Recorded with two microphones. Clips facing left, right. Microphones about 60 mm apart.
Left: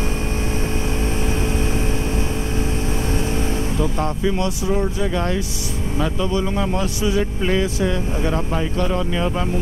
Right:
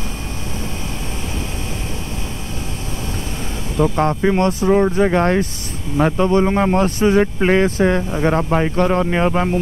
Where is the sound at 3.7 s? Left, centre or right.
Right.